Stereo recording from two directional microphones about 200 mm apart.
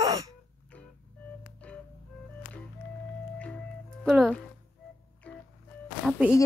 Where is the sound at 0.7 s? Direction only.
5° left (ahead or behind).